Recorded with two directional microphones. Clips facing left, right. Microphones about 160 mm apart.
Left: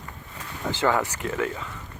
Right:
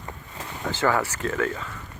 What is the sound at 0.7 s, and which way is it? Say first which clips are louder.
Speech: even; 15° left (ahead or behind).